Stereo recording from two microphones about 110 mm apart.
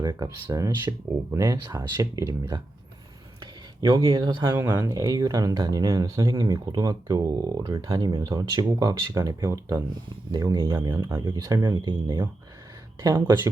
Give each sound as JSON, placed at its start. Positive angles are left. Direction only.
{"t": 0.0, "sound": "speech", "side_deg": -35}
{"t": 3.8, "sound": "speech", "side_deg": -40}
{"t": 11.3, "sound": "speech", "side_deg": -35}
{"t": 13.0, "sound": "speech", "side_deg": -25}